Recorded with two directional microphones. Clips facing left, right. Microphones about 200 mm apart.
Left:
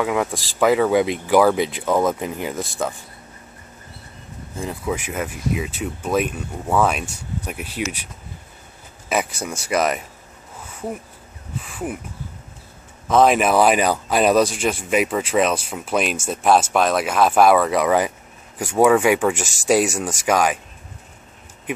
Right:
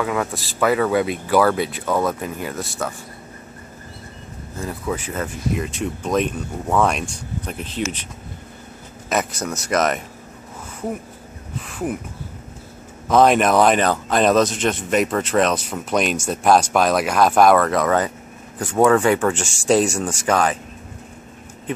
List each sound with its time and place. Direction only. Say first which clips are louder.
0.0 s speech: left 1 dB; 15° left (ahead or behind)
4.6 s speech: even; 10° left (ahead or behind)
9.1 s speech: right 1 dB; 10° left (ahead or behind)
11.6 s speech: right 3 dB; centre (ahead or behind)
13.1 s speech: right 1 dB; centre (ahead or behind)